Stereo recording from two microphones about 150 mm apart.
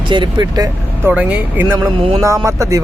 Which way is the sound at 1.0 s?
10° right (ahead or behind).